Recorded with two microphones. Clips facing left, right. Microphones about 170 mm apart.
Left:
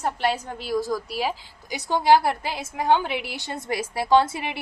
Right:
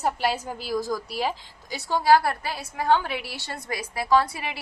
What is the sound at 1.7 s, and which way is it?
A woman's voice, 20° left (ahead or behind).